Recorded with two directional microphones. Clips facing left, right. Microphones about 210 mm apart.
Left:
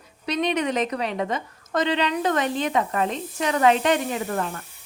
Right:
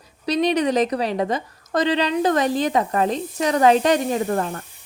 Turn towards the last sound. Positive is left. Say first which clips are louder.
# right 5 dB
turn(degrees=-40)  # may be behind; listen again after turning